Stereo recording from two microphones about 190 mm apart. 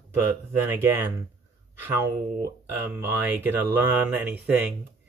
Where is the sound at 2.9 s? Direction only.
10° right (ahead or behind).